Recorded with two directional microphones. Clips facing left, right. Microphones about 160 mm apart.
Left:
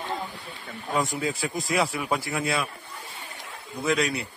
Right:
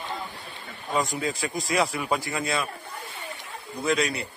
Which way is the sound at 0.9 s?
Centre (ahead or behind).